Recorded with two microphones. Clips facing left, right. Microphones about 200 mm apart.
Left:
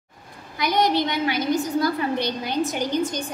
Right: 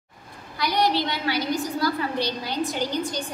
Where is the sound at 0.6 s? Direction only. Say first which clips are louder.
Left 2 dB; 20° left (ahead or behind).